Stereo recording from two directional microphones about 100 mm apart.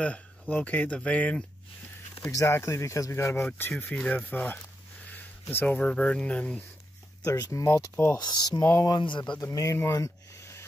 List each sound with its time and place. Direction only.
0.0 s speech: 15° left (ahead or behind)
2.3 s speech: 30° left (ahead or behind)
3.8 s speech: 15° left (ahead or behind)
7.2 s speech: 35° left (ahead or behind)
7.9 s speech: 20° left (ahead or behind)
8.2 s speech: 45° left (ahead or behind)
9.4 s speech: 35° left (ahead or behind)
9.9 s a sound: 30° left (ahead or behind)